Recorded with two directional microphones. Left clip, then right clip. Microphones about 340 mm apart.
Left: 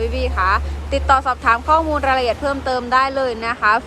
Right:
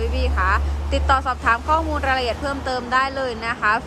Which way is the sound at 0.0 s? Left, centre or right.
Centre.